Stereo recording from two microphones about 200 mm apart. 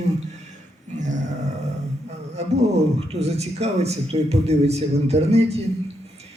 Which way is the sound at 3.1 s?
30° right (ahead or behind).